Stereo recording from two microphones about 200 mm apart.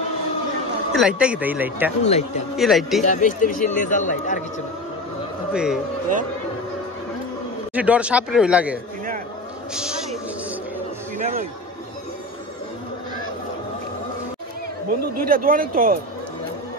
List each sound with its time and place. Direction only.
0.9 s speech: 5° right (ahead or behind)
2.0 s a man's voice: 35° left (ahead or behind)
2.5 s speech: centre (ahead or behind)
3.0 s a man's voice: 40° left (ahead or behind)
5.5 s a man's voice: 5° right (ahead or behind)
7.7 s speech: 5° right (ahead or behind)
9.8 s speech: 5° right (ahead or behind)
11.1 s a man's voice: 40° right (ahead or behind)
14.9 s speech: 45° right (ahead or behind)